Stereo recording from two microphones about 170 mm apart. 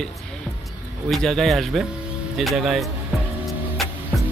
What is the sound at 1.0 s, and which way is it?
Speech, centre (ahead or behind).